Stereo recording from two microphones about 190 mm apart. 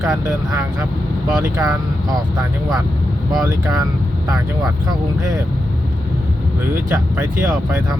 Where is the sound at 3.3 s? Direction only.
20° right (ahead or behind).